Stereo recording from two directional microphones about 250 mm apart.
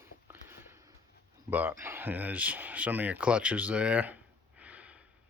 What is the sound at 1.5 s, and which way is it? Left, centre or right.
Speech, centre.